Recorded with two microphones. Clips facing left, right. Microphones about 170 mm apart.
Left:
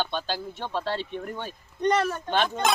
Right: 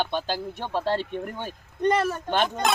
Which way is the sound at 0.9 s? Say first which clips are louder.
Right 4 dB; 45° right (ahead or behind).